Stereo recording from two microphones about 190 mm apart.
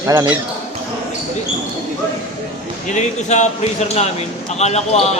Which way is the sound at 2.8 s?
40° left (ahead or behind).